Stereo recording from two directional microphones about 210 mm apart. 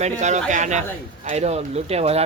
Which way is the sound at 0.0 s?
35° right (ahead or behind).